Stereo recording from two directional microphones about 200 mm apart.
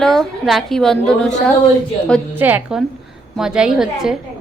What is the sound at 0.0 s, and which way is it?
A woman's voice, centre (ahead or behind).